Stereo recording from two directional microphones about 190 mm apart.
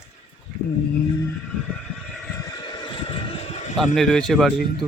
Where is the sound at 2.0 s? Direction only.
5° left (ahead or behind).